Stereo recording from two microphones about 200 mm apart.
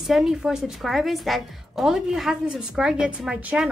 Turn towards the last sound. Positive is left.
turn(degrees=-5)  # may be behind; listen again after turning